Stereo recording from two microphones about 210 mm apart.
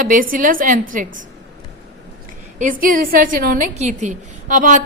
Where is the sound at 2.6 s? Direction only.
40° right (ahead or behind).